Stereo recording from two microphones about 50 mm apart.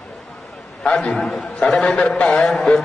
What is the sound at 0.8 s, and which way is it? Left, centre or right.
A man's voice, centre.